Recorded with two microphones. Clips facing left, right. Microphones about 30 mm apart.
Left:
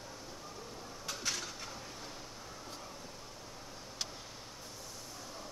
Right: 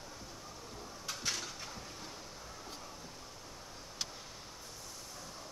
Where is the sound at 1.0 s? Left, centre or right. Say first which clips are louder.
Even; centre.